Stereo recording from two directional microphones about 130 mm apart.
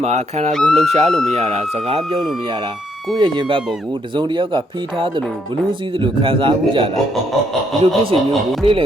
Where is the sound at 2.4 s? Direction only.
40° right (ahead or behind).